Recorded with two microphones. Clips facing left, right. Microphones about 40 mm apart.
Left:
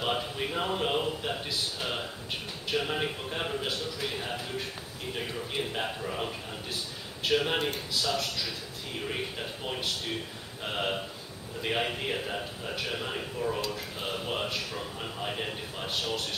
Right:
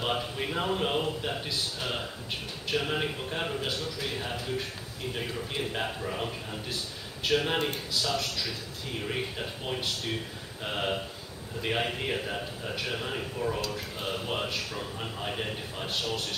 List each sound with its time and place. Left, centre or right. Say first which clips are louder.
0.0 s a man's voice: even; centre
5.7 s a man's voice: right 1 dB; centre
10.6 s a man's voice: even; centre